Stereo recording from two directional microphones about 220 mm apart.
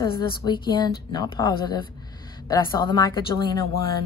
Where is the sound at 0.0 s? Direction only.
20° left (ahead or behind).